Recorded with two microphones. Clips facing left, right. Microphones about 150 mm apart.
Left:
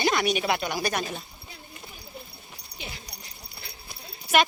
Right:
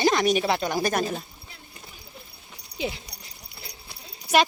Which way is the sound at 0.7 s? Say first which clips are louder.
Right 4 dB; 45° right (ahead or behind).